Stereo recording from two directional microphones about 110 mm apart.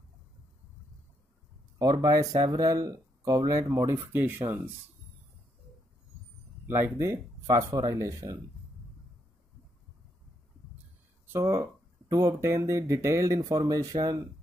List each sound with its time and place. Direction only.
1.8 s speech: 35° right (ahead or behind)
4.4 s speech: 45° right (ahead or behind)
6.6 s speech: 20° right (ahead or behind)
11.3 s speech: 25° right (ahead or behind)